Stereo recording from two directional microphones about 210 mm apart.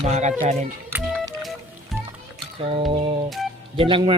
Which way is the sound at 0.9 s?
Centre (ahead or behind).